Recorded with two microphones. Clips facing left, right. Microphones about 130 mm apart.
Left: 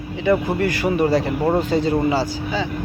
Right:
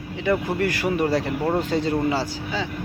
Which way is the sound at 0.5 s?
Centre (ahead or behind).